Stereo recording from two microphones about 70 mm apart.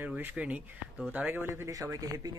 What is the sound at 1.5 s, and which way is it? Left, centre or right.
Speech, right.